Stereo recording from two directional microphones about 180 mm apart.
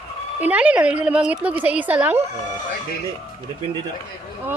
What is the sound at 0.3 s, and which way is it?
A woman's voice, 10° right (ahead or behind).